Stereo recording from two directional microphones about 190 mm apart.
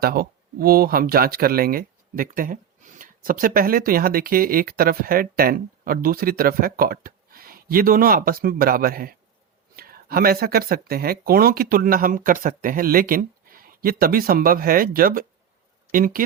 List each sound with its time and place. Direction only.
0.0 s speech: 50° right (ahead or behind)